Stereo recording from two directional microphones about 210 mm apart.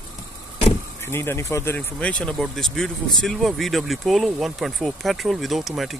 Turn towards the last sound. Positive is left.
turn(degrees=0)  # may be behind; listen again after turning